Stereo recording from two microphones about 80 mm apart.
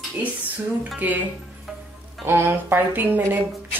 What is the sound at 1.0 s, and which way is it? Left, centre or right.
Speech, right.